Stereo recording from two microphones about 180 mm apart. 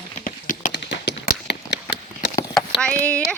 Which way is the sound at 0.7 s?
70° left (ahead or behind).